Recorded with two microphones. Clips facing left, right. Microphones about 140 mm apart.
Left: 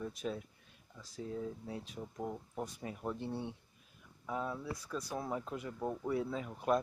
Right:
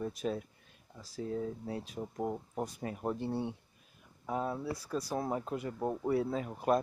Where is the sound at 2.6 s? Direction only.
55° right (ahead or behind).